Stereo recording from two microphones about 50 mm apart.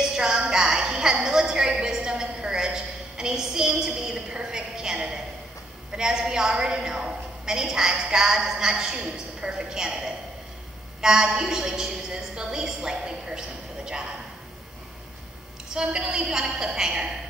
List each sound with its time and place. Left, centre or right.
0.0 s music: centre
5.9 s a woman's voice: centre
15.7 s a woman's voice: centre